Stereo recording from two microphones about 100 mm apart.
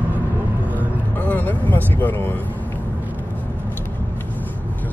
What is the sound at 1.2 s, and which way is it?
Speech, 15° left (ahead or behind).